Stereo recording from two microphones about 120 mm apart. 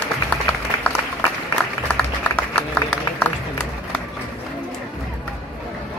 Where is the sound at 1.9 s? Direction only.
5° left (ahead or behind).